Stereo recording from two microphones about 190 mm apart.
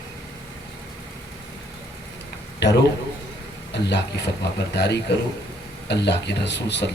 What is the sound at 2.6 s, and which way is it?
A man's voice, 70° left (ahead or behind).